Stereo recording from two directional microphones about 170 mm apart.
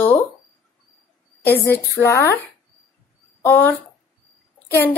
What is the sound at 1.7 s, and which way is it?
Speech, 15° left (ahead or behind).